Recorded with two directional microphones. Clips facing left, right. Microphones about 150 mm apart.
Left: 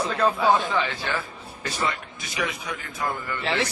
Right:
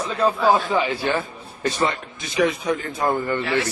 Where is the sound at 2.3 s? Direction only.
35° right (ahead or behind).